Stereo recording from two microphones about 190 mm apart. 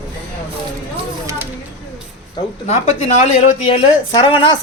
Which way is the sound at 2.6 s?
35° left (ahead or behind).